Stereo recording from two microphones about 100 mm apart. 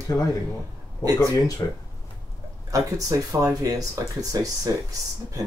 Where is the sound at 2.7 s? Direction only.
35° right (ahead or behind).